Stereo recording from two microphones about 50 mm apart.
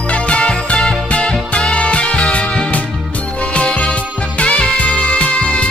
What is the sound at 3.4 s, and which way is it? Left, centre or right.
Music, left.